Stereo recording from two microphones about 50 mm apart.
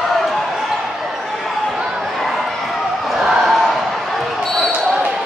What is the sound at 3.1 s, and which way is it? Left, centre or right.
Basketball bounce, centre.